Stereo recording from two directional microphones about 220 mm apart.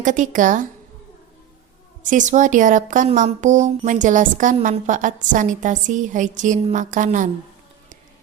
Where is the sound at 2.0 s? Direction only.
35° right (ahead or behind).